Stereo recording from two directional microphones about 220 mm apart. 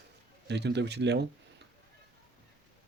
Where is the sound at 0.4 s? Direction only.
50° right (ahead or behind).